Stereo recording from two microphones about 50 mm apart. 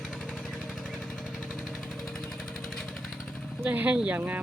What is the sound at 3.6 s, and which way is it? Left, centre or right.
Speech, right.